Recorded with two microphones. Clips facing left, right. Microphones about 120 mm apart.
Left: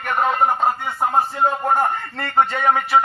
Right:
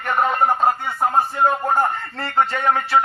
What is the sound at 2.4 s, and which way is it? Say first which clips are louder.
Speech: left 1 dB; 15° left (ahead or behind).